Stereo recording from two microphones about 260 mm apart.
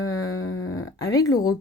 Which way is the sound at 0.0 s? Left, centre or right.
Left.